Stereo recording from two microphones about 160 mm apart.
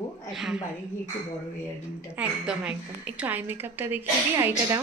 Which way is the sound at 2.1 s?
5° right (ahead or behind).